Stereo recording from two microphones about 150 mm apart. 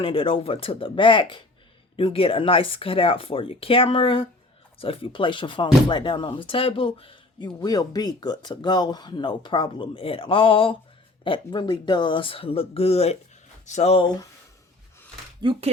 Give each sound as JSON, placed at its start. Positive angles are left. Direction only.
{"t": 0.0, "sound": "speech", "side_deg": 35}
{"t": 15.4, "sound": "speech", "side_deg": -35}